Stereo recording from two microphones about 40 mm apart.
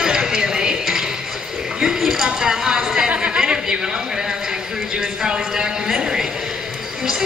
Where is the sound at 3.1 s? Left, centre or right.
Right.